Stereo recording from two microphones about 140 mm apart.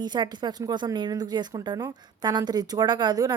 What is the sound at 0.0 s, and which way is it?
A woman's voice, 30° right (ahead or behind).